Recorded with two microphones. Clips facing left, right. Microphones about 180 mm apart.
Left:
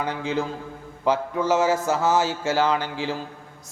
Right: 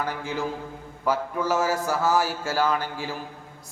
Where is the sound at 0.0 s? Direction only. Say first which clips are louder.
Left 3 dB; 20° left (ahead or behind).